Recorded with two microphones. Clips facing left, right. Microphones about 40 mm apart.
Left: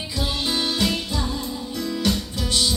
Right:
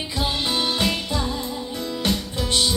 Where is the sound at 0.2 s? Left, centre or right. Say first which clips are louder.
Right 1 dB; right.